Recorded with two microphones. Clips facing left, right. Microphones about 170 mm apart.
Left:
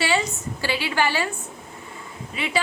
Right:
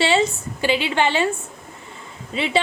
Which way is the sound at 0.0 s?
25° right (ahead or behind).